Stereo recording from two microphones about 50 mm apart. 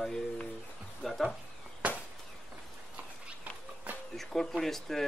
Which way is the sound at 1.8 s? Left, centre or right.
Right.